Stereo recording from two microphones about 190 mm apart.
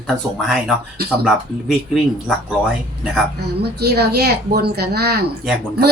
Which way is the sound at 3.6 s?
60° right (ahead or behind).